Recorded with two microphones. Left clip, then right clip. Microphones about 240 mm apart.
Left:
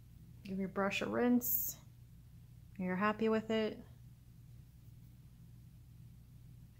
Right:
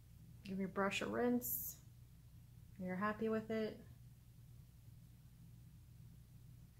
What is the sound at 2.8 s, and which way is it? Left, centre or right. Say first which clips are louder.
Speech: left 6 dB; left.